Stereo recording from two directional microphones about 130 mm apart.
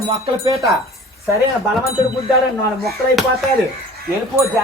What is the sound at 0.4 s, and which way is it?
Speech, 25° right (ahead or behind).